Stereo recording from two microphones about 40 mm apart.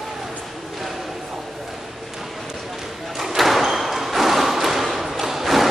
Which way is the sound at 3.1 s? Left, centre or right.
Centre.